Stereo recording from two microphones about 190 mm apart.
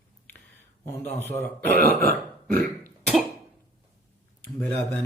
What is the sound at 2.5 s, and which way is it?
Throat clearing, 10° left (ahead or behind).